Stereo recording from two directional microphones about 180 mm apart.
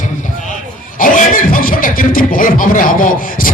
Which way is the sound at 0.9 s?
50° left (ahead or behind).